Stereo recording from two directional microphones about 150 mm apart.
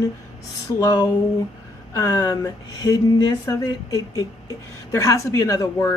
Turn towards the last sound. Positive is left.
turn(degrees=20)  # may be behind; listen again after turning